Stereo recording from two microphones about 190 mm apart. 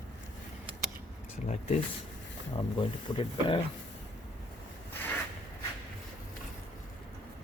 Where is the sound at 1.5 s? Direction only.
35° left (ahead or behind).